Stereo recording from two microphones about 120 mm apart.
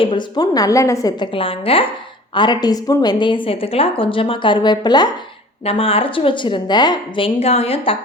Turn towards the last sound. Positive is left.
turn(degrees=55)  # may be behind; listen again after turning